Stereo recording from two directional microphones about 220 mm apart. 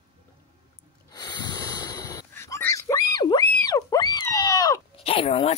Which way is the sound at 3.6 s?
15° left (ahead or behind).